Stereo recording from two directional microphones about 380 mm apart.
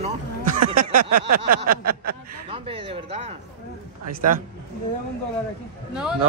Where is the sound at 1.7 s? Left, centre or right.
Right.